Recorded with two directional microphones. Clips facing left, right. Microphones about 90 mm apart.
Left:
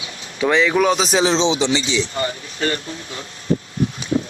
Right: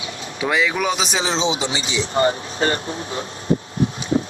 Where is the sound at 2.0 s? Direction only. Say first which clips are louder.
Right 5 dB; 35° right (ahead or behind).